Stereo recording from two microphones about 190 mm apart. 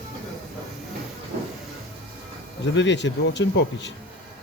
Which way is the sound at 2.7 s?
70° left (ahead or behind).